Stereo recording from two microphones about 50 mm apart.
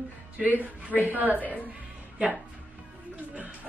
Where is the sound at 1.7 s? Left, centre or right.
Right.